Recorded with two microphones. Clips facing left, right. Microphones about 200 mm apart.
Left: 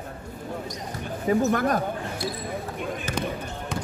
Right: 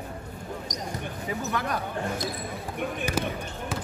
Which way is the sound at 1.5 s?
45° left (ahead or behind).